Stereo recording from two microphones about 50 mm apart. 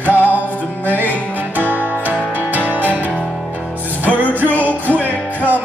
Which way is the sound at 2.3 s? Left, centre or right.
Right.